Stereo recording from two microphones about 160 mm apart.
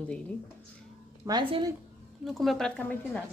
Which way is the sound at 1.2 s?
25° right (ahead or behind).